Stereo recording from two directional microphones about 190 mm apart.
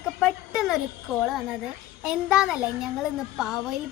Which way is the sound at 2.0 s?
5° right (ahead or behind).